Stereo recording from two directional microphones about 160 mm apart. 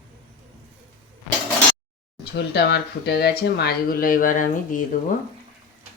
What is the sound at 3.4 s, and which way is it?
Speech, 75° left (ahead or behind).